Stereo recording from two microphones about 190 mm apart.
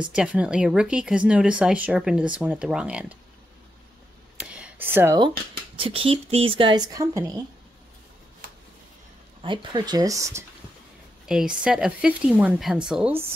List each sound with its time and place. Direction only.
0.1 s speech: 5° right (ahead or behind)
4.4 s a sound: 5° right (ahead or behind)
5.8 s a woman's voice: 30° right (ahead or behind)
8.4 s a sound: 50° right (ahead or behind)
9.4 s a woman's voice: 25° right (ahead or behind)
11.2 s speech: 5° right (ahead or behind)